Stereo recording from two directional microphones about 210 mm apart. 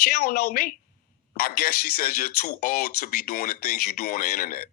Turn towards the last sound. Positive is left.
turn(degrees=40)  # may be behind; listen again after turning